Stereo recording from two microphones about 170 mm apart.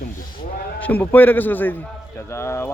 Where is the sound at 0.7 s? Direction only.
10° left (ahead or behind).